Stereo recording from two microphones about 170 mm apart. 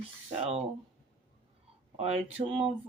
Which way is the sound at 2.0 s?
35° right (ahead or behind).